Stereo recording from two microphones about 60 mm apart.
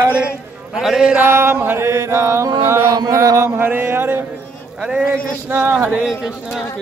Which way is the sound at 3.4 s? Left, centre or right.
Right.